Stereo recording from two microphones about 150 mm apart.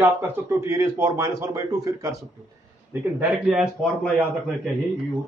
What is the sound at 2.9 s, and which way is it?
Speech, 10° right (ahead or behind).